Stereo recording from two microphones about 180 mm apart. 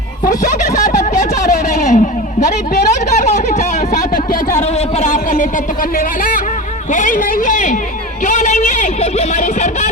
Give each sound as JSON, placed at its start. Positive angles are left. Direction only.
{"t": 0.9, "sound": "guitar", "side_deg": 40}
{"t": 4.3, "sound": "a sound", "side_deg": 40}
{"t": 6.9, "sound": "speech", "side_deg": 45}